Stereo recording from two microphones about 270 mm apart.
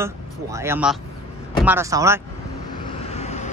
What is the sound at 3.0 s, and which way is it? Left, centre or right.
Vehicle, left.